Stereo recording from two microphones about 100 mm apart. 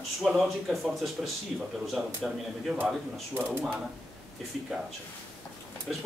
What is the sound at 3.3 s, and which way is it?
Speech, 20° right (ahead or behind).